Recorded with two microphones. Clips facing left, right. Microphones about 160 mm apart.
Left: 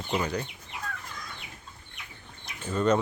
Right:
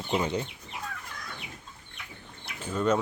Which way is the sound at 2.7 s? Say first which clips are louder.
Left 2 dB; 5° right (ahead or behind).